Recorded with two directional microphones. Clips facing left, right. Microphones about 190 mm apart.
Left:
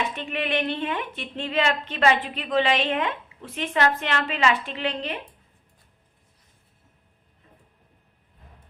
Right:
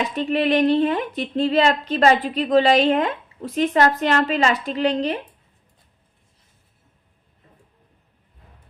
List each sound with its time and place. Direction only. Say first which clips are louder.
0.0 s speech: right 8 dB; 35° right (ahead or behind)